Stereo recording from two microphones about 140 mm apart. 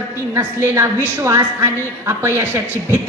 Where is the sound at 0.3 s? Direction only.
20° right (ahead or behind).